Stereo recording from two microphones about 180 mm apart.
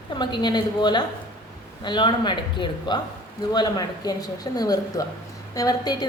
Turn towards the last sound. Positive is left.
turn(degrees=20)  # may be behind; listen again after turning